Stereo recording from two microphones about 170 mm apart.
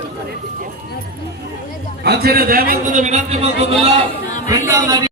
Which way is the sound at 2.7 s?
45° right (ahead or behind).